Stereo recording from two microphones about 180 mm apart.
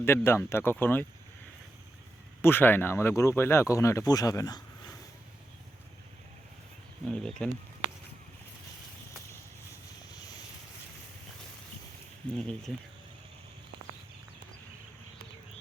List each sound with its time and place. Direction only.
0.0 s speech: 15° left (ahead or behind)
2.4 s speech: 10° left (ahead or behind)
7.1 s speech: 5° left (ahead or behind)
12.4 s speech: centre (ahead or behind)